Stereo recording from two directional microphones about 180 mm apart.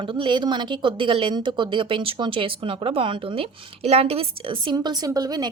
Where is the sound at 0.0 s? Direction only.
25° right (ahead or behind).